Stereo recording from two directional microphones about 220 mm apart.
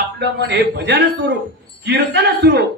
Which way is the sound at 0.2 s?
50° right (ahead or behind).